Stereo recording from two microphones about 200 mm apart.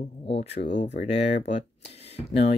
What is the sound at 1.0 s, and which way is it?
Speech, 35° left (ahead or behind).